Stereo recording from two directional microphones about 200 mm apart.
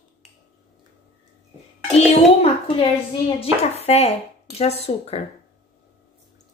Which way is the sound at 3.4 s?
30° left (ahead or behind).